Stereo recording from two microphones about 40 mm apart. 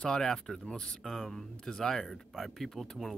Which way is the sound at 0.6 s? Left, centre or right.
Left.